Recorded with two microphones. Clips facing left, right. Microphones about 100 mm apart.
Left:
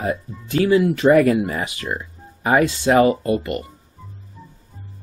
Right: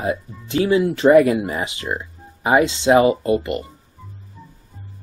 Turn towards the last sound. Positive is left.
turn(degrees=-25)  # may be behind; listen again after turning